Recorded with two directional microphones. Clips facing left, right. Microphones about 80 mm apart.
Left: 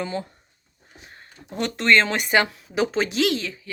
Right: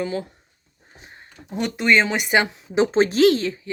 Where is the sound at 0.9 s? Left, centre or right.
Right.